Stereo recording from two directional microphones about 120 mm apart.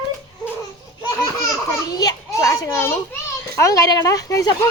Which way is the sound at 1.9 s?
30° left (ahead or behind).